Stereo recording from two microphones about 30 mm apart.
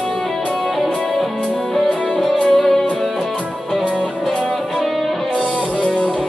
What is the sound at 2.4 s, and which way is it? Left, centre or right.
Music, centre.